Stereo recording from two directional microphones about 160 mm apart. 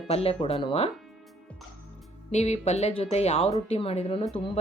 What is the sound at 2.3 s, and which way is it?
Speech, 45° left (ahead or behind).